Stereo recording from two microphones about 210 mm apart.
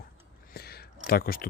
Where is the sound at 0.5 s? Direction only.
50° left (ahead or behind).